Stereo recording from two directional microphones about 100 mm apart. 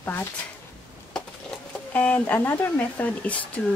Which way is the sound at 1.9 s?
15° left (ahead or behind).